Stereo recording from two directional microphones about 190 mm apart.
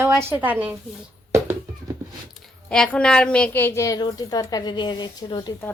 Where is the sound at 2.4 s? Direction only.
5° left (ahead or behind); by 5.5 s 25° left (ahead or behind).